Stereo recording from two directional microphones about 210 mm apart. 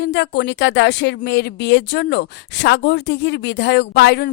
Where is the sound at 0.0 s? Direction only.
55° left (ahead or behind).